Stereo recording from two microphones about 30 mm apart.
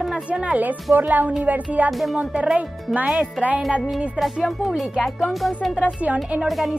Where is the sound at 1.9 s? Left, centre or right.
Centre.